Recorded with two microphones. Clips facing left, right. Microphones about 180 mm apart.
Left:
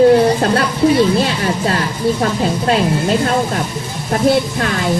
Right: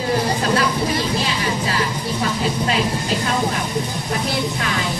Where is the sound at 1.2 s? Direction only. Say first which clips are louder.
Left 5 dB; 55° left (ahead or behind).